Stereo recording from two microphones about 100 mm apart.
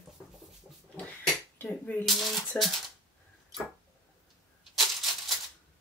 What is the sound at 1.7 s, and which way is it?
Speech, 15° left (ahead or behind).